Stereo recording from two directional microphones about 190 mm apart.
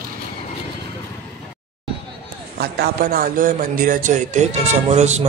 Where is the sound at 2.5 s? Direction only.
55° right (ahead or behind).